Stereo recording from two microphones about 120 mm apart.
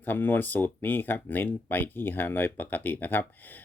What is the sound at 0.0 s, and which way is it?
Speech, 15° left (ahead or behind).